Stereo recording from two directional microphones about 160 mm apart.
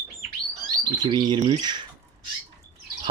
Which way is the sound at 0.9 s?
25° right (ahead or behind).